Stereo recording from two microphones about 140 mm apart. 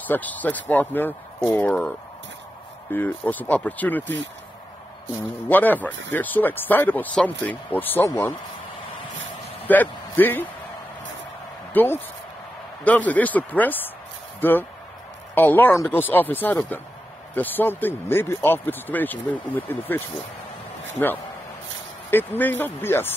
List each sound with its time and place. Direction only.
0.0 s speech: 10° left (ahead or behind)
5.5 s speech: 15° left (ahead or behind)
9.7 s a sound: 15° left (ahead or behind)
11.7 s speech: 15° left (ahead or behind)
22.1 s speech: 15° left (ahead or behind)